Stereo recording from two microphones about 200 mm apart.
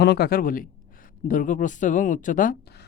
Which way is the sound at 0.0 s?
55° left (ahead or behind).